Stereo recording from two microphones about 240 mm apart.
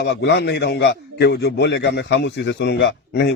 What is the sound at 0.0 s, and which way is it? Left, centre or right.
A man's voice, left.